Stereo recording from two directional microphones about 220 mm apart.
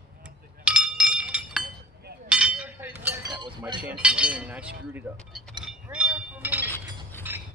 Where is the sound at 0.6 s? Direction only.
5° right (ahead or behind); by 3.7 s 20° right (ahead or behind).